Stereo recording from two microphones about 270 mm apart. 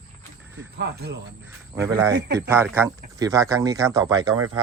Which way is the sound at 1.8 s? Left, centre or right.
Centre.